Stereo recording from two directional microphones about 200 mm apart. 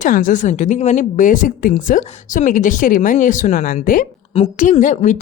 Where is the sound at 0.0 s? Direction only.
40° left (ahead or behind).